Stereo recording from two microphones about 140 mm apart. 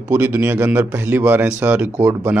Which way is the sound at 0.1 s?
10° right (ahead or behind).